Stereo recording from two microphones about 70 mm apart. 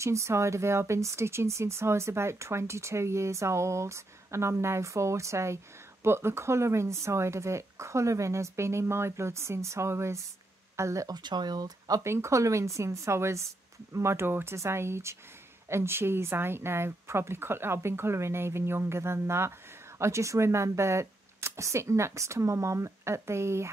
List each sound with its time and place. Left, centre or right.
0.0 s speech: right
11.1 s speech: right
12.0 s speech: right